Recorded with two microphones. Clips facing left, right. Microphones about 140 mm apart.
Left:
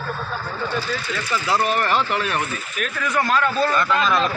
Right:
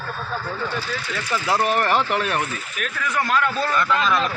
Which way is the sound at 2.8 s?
5° right (ahead or behind).